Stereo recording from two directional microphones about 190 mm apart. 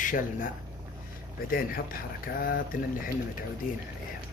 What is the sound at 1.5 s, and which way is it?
Speech, 50° left (ahead or behind).